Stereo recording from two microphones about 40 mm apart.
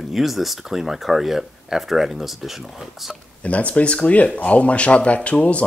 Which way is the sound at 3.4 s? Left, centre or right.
Left.